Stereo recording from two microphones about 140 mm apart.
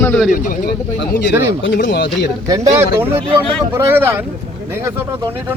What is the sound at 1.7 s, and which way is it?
Speech, 85° left.